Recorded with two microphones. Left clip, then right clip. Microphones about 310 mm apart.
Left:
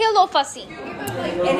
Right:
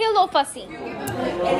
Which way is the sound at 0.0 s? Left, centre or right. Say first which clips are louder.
Left 2 dB; centre.